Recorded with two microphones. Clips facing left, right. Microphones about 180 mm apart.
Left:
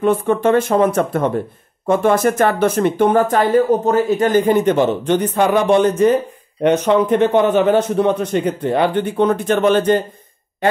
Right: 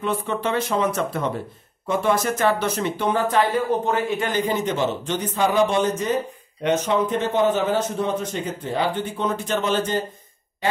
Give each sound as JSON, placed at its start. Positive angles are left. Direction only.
{"t": 0.0, "sound": "a man's voice", "side_deg": 50}